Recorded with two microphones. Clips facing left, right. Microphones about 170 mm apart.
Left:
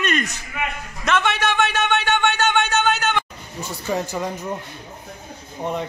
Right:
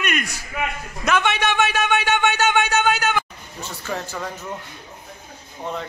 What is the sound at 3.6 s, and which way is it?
Speech, 10° left (ahead or behind).